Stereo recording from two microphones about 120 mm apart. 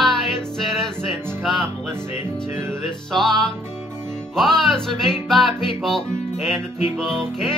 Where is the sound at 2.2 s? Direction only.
20° right (ahead or behind).